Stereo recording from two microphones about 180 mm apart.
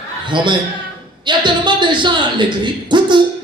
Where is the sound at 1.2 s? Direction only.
25° right (ahead or behind).